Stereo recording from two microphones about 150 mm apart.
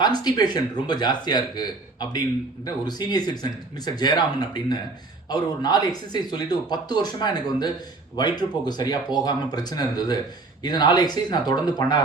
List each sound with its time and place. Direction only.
0.0 s speech: 25° left (ahead or behind)